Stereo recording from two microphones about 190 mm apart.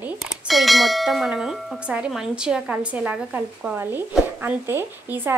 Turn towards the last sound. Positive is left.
turn(degrees=-10)  # may be behind; listen again after turning